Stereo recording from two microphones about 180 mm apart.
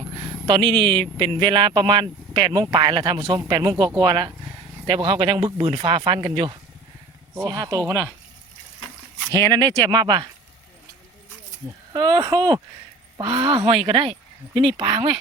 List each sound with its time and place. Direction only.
0.2 s a sound: 25° right (ahead or behind)
1.2 s speech: 25° right (ahead or behind)
9.3 s speech: 20° right (ahead or behind)
11.9 s speech: 25° right (ahead or behind)